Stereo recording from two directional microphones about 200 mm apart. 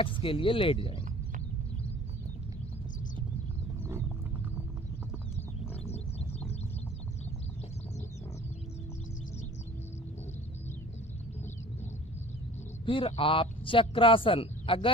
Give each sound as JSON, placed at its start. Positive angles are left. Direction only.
{"t": 0.0, "sound": "speech", "side_deg": 25}
{"t": 5.7, "sound": "a sound", "side_deg": 30}
{"t": 12.8, "sound": "speech", "side_deg": 25}